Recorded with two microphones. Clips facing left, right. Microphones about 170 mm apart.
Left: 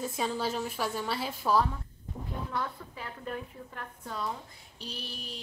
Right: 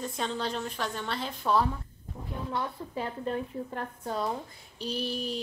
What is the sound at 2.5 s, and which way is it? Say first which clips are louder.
A woman's voice: right 5 dB; 25° right (ahead or behind).